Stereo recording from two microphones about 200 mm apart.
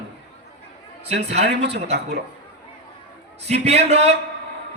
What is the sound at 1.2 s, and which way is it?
Speech, 30° right (ahead or behind).